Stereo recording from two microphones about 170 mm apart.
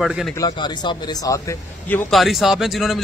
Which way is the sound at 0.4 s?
25° left (ahead or behind).